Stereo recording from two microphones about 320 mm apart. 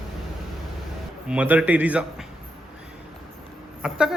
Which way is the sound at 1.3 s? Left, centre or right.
Centre.